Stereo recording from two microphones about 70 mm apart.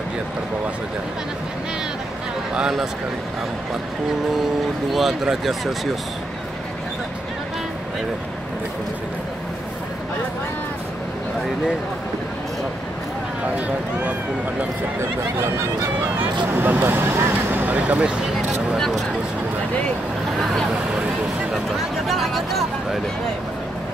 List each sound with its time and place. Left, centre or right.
4.9 s speech: centre
13.6 s speech: centre
16.2 s speech: right
22.0 s speech: centre